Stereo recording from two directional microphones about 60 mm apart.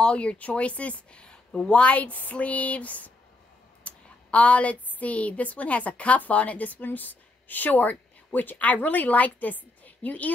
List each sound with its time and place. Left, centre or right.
0.0 s a woman's voice: centre
3.8 s a sound: left
4.9 s a woman's voice: left